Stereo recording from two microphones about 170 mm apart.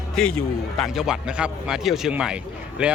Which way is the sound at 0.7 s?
Centre (ahead or behind).